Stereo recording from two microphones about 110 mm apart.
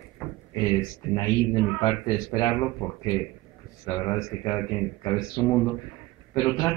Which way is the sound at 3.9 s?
35° left (ahead or behind).